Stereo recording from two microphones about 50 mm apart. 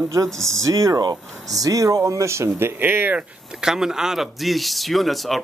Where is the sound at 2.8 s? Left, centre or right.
Right.